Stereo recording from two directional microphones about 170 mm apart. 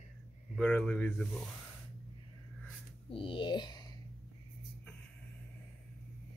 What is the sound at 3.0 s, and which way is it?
Speech, 30° left (ahead or behind).